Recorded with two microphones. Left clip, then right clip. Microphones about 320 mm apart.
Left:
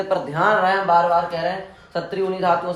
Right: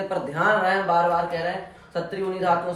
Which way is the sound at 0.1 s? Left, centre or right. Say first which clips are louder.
Left 4 dB; centre.